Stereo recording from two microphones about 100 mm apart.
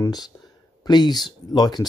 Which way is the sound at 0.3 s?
25° left (ahead or behind).